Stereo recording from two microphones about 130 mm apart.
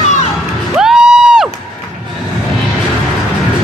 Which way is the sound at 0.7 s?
5° right (ahead or behind).